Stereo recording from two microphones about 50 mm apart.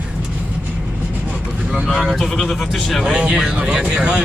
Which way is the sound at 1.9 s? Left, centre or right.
Centre.